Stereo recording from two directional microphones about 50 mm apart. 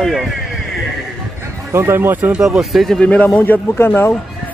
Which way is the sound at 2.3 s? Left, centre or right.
Centre.